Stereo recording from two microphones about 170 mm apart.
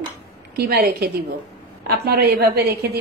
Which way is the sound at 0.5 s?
65° right (ahead or behind).